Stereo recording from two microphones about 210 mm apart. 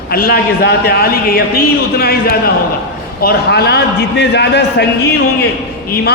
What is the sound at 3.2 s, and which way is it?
A man's voice, 50° left (ahead or behind).